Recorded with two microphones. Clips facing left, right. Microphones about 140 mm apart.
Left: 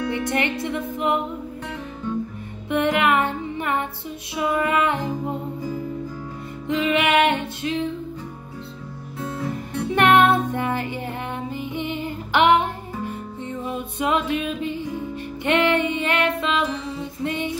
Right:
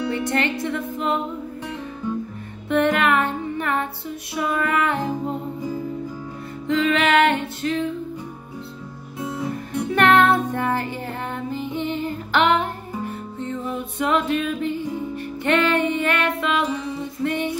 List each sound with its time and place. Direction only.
0.1 s music: 15° left (ahead or behind)
2.7 s music: 15° left (ahead or behind)
6.7 s music: 15° left (ahead or behind)
9.2 s music: 10° right (ahead or behind)
9.8 s music: 20° left (ahead or behind)